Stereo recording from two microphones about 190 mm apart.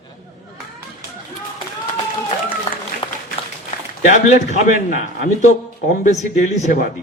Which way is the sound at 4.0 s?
40° left (ahead or behind).